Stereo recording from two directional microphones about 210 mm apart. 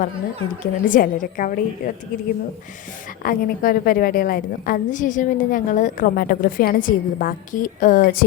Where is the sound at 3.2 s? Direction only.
45° left (ahead or behind).